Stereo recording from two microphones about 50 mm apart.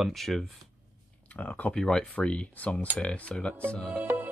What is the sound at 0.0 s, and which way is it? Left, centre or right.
Speech, centre.